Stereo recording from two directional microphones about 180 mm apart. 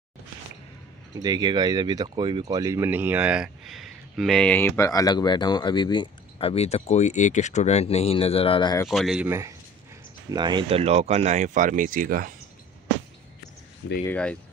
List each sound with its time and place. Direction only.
1.1 s speech: 20° right (ahead or behind); by 8.8 s 25° left (ahead or behind)
8.8 s speech: centre (ahead or behind)
10.3 s speech: 25° right (ahead or behind); by 12.3 s 50° right (ahead or behind)
14.0 s speech: 5° left (ahead or behind)